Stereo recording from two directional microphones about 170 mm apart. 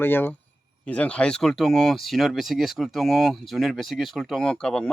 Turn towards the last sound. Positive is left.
turn(degrees=5)  # may be behind; listen again after turning